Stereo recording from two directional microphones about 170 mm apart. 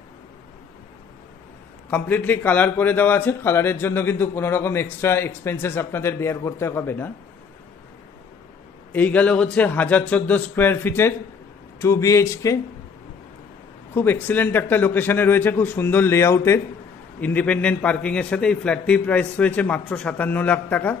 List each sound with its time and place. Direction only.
1.9 s a man's voice: 10° left (ahead or behind)
8.9 s a man's voice: 10° left (ahead or behind)
13.9 s a man's voice: 10° left (ahead or behind)